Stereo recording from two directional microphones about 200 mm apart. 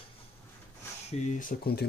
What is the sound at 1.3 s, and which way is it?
Speech, 50° left (ahead or behind).